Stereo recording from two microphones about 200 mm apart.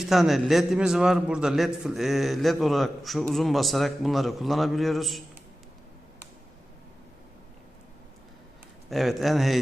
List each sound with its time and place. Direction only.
0.0 s a man's voice: centre (ahead or behind)
8.9 s a man's voice: centre (ahead or behind)